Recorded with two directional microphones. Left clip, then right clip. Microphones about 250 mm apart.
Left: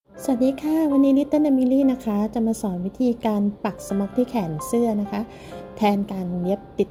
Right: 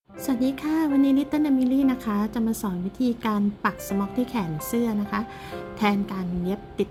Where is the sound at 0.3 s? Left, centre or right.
Centre.